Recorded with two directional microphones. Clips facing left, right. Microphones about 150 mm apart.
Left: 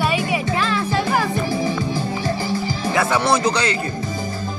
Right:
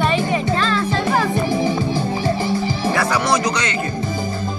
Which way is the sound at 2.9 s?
25° left (ahead or behind).